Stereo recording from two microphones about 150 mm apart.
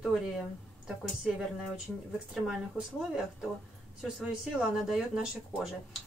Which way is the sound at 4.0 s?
5° right (ahead or behind).